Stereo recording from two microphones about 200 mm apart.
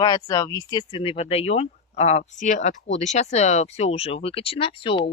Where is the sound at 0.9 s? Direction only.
30° left (ahead or behind).